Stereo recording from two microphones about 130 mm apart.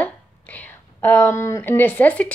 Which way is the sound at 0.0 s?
10° left (ahead or behind).